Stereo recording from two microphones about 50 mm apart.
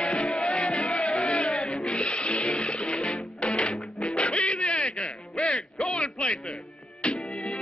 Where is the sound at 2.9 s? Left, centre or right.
Centre.